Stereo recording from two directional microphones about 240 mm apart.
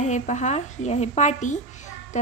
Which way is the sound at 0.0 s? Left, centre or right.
Left.